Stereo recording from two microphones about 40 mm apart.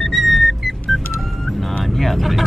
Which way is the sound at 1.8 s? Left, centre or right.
Centre.